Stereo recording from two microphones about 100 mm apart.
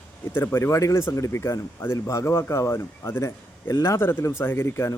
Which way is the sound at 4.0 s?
20° left (ahead or behind).